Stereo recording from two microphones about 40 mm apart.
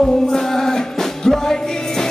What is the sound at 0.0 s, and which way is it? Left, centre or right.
Music, centre.